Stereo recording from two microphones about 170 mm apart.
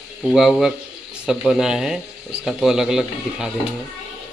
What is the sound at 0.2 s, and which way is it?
Speech, centre (ahead or behind).